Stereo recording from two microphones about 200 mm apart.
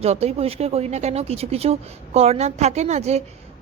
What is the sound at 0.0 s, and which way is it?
Speech, 30° right (ahead or behind).